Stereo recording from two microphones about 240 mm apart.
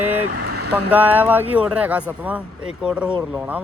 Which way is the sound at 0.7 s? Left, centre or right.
Centre.